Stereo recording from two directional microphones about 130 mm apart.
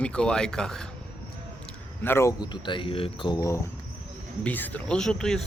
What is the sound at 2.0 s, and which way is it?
Speech, 20° left (ahead or behind).